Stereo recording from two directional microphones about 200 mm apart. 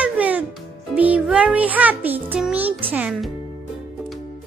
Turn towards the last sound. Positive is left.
turn(degrees=-5)  # may be behind; listen again after turning